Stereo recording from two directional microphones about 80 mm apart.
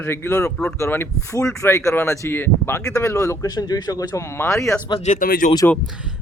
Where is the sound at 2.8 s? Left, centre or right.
Left.